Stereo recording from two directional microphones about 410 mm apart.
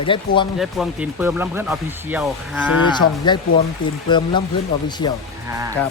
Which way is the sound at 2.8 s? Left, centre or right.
Centre.